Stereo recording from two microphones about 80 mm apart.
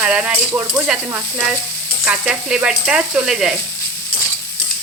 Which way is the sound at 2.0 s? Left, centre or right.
Centre.